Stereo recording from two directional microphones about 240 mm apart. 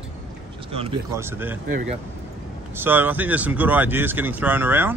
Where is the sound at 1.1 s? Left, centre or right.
Centre.